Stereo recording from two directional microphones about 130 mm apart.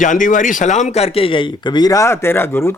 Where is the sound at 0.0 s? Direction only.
85° left.